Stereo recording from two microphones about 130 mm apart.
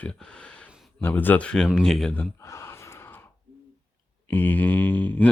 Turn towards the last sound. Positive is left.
turn(degrees=15)  # may be behind; listen again after turning